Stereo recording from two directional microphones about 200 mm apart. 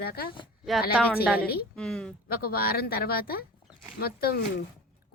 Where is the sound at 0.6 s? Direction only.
Centre (ahead or behind).